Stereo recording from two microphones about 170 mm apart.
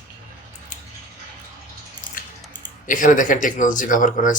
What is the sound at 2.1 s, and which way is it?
Squish, 25° right (ahead or behind).